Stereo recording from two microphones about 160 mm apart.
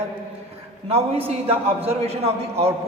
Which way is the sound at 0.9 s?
40° right (ahead or behind).